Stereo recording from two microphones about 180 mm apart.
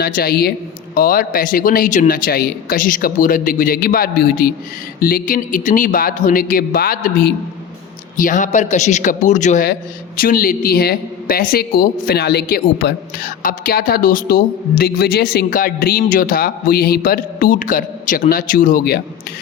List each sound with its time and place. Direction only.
0.0 s a woman's voice: 60° left (ahead or behind)